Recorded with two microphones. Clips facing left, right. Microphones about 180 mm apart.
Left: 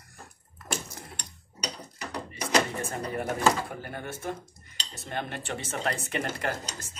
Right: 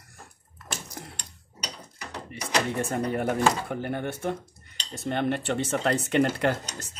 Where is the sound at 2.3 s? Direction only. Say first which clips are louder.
Left 1 dB; 65° right (ahead or behind).